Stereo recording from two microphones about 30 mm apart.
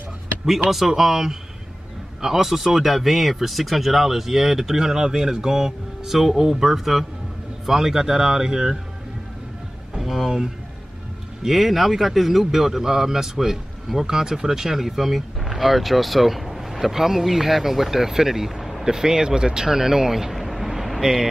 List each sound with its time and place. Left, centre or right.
0.5 s speech: centre
10.0 s a sound: centre
11.4 s speech: centre
18.9 s speech: centre